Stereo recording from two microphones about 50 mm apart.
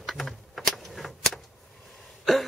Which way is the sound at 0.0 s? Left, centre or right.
Centre.